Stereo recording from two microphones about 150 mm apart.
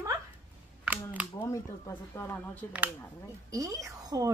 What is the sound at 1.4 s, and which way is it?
Speech, 20° left (ahead or behind).